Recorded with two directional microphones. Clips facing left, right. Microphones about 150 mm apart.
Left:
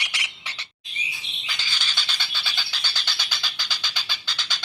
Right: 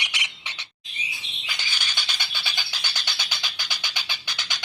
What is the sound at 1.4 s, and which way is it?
Bird, 15° right (ahead or behind).